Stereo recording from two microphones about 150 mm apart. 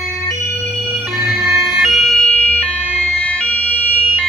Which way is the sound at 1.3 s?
Centre (ahead or behind).